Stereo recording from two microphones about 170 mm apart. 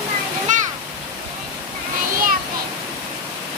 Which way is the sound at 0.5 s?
45° right (ahead or behind).